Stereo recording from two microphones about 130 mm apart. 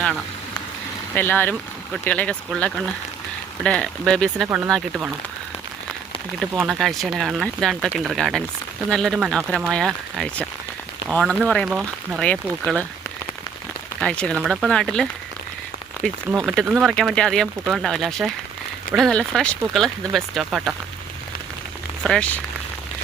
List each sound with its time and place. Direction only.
1.1 s speech: 15° left (ahead or behind)
6.6 s speech: centre (ahead or behind)
9.1 s speech: 5° right (ahead or behind)
11.7 s speech: 5° right (ahead or behind)
12.2 s speech: 10° left (ahead or behind)
14.0 s speech: 5° left (ahead or behind)
14.4 s speech: 5° right (ahead or behind)
14.7 s speech: 5° left (ahead or behind)
16.5 s speech: centre (ahead or behind)
22.0 s speech: 5° left (ahead or behind)